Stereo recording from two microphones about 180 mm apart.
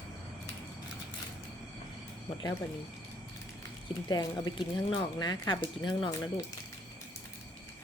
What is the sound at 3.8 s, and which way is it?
Speech, 25° left (ahead or behind).